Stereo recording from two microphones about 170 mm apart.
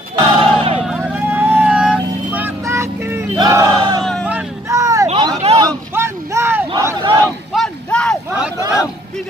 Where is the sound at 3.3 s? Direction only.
20° right (ahead or behind).